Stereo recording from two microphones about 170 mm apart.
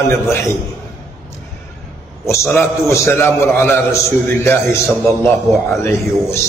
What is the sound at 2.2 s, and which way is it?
A man's voice, 15° left (ahead or behind).